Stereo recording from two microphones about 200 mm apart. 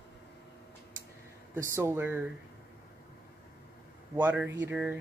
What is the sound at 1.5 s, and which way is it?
Speech, 15° right (ahead or behind).